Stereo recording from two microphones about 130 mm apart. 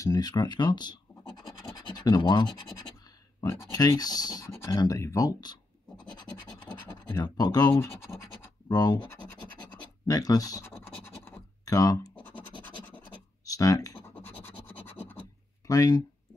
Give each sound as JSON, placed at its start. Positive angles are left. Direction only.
{"t": 0.0, "sound": "speech", "side_deg": 30}
{"t": 1.7, "sound": "scratch", "side_deg": 30}
{"t": 3.4, "sound": "speech", "side_deg": 25}
{"t": 4.8, "sound": "speech", "side_deg": 25}
{"t": 6.9, "sound": "speech", "side_deg": 30}
{"t": 10.6, "sound": "scratch", "side_deg": 20}
{"t": 12.6, "sound": "scratch", "side_deg": 15}
{"t": 13.5, "sound": "computer keyboard", "side_deg": 25}
{"t": 14.1, "sound": "scratch", "side_deg": 15}
{"t": 15.6, "sound": "speech", "side_deg": 30}